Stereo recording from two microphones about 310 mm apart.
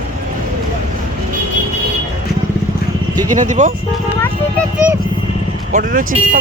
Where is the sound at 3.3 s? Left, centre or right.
Right.